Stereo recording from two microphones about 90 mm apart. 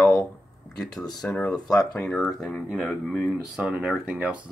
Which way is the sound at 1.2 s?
15° left (ahead or behind).